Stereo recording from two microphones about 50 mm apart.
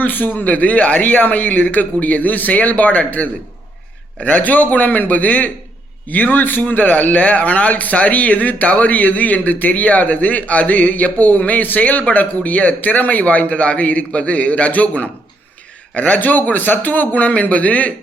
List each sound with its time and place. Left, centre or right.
0.0 s a man's voice: left